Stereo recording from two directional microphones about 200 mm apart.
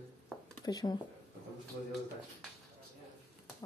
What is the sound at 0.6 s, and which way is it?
Speech, 20° left (ahead or behind).